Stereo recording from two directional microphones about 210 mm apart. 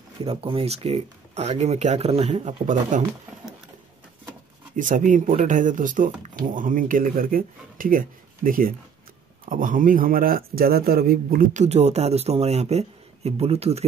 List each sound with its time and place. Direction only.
0.2 s speech: 25° right (ahead or behind)
4.7 s speech: 40° right (ahead or behind)